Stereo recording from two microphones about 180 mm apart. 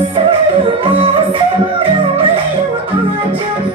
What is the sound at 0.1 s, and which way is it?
Music, 30° right (ahead or behind).